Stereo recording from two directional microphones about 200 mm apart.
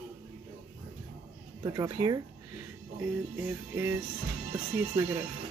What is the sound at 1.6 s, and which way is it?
Speech, 20° right (ahead or behind).